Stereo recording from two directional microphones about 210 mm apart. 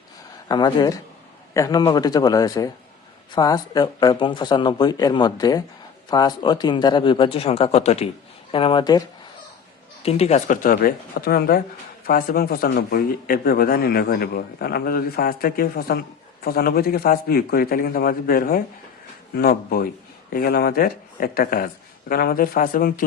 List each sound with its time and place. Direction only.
0.4 s speech: 20° left (ahead or behind)
10.0 s a man's voice: 30° left (ahead or behind)